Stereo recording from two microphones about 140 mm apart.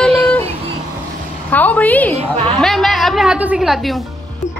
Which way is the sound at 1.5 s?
10° left (ahead or behind).